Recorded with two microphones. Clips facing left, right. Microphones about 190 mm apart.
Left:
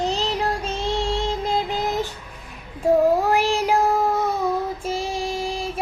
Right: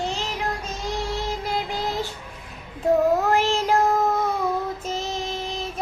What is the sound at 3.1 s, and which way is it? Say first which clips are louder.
Child singing: left 1 dB; 10° left (ahead or behind).